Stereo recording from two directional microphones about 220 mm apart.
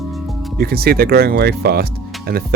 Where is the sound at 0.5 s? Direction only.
45° right (ahead or behind).